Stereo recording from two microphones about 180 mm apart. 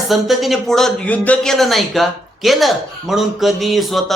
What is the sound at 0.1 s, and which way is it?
A man's voice, centre (ahead or behind).